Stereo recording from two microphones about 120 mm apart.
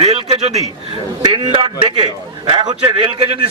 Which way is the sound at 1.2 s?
40° right (ahead or behind).